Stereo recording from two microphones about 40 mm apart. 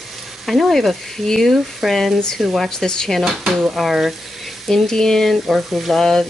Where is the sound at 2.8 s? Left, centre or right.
Centre.